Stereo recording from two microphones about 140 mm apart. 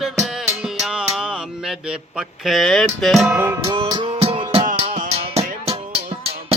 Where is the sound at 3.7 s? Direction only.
30° right (ahead or behind).